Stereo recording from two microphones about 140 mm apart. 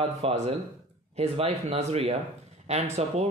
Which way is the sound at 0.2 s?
50° right (ahead or behind).